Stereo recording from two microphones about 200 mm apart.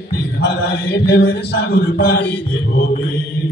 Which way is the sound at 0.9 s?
55° left (ahead or behind).